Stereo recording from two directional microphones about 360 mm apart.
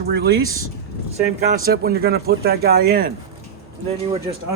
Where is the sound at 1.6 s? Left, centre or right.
Right.